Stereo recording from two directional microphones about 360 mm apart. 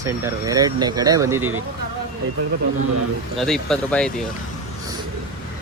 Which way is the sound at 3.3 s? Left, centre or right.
Centre.